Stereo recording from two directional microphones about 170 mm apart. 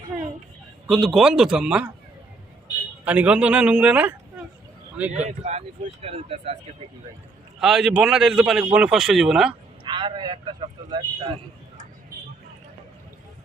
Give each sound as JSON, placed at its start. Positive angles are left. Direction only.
{"t": 0.9, "sound": "speech", "side_deg": 0}
{"t": 3.0, "sound": "a man's voice", "side_deg": -10}
{"t": 5.1, "sound": "speech", "side_deg": -40}
{"t": 7.6, "sound": "speech", "side_deg": -5}
{"t": 9.5, "sound": "speech", "side_deg": -30}